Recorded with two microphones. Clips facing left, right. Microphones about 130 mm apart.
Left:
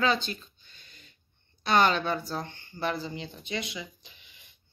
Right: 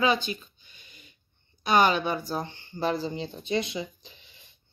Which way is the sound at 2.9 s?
35° right (ahead or behind).